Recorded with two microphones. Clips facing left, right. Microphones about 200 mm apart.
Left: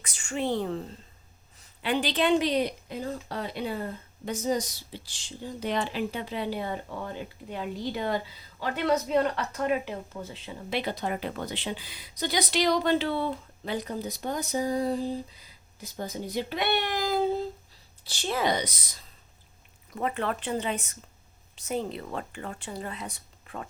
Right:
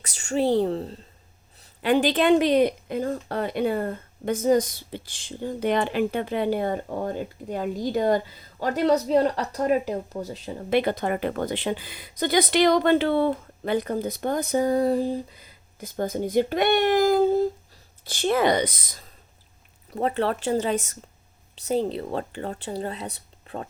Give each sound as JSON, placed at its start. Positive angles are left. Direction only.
{"t": 0.0, "sound": "speech", "side_deg": -40}
{"t": 1.8, "sound": "speech", "side_deg": -50}
{"t": 19.9, "sound": "speech", "side_deg": -35}